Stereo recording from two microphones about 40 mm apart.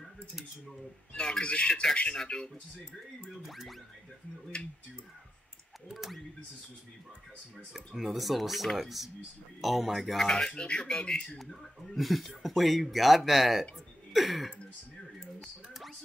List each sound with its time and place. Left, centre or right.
1.1 s speech: centre
1.4 s speech: left
1.7 s speech: centre
3.4 s speech: centre
5.9 s speech: centre
7.7 s speech: centre
10.2 s speech: centre
11.9 s speech: centre